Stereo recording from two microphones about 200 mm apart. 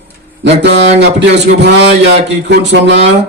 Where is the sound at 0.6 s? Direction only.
60° right (ahead or behind).